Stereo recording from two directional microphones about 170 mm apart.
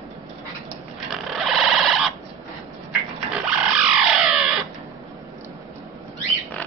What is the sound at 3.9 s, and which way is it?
Music, 5° right (ahead or behind).